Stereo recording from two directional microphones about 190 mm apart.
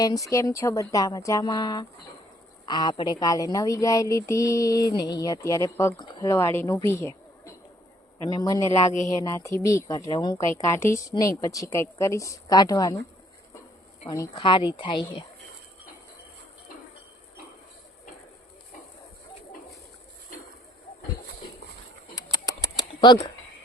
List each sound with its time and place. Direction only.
0.0 s a woman's voice: 20° left (ahead or behind)
8.7 s speech: 35° left (ahead or behind)
9.2 s a woman's voice: 15° left (ahead or behind)
14.1 s speech: 20° left (ahead or behind)
22.1 s bird: 20° left (ahead or behind)